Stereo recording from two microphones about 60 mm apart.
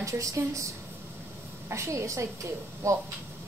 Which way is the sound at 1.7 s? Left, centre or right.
Right.